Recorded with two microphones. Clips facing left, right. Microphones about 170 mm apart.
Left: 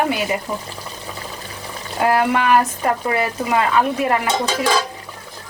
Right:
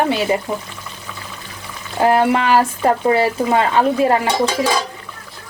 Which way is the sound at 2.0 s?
30° right (ahead or behind).